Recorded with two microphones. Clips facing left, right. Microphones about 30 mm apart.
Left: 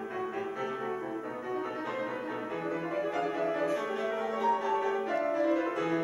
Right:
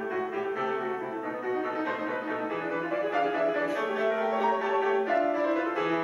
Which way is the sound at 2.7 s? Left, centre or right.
Centre.